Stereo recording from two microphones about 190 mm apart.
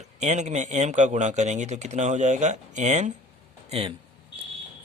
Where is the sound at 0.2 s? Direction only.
35° right (ahead or behind).